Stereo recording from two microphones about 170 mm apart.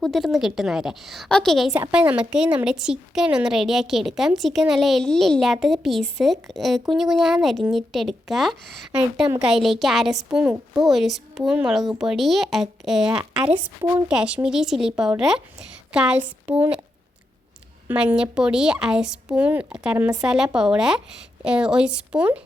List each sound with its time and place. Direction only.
0.0 s a woman's voice: centre (ahead or behind)
17.8 s a woman's voice: 10° right (ahead or behind)